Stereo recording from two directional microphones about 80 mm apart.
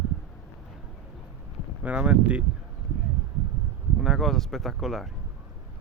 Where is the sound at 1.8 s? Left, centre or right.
Centre.